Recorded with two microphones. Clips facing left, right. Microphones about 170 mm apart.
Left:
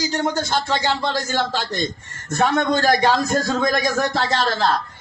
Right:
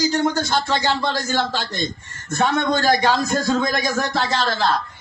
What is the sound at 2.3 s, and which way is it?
A man's voice, 30° left (ahead or behind).